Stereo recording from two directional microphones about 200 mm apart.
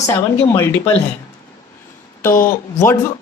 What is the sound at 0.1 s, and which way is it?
Speech, 10° left (ahead or behind).